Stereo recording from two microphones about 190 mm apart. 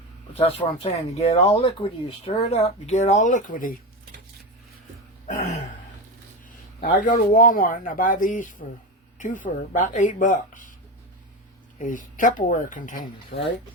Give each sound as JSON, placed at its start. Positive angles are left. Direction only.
{"t": 0.4, "sound": "speech", "side_deg": 35}
{"t": 5.3, "sound": "throat clearing", "side_deg": 40}
{"t": 6.8, "sound": "speech", "side_deg": 45}
{"t": 11.8, "sound": "speech", "side_deg": 45}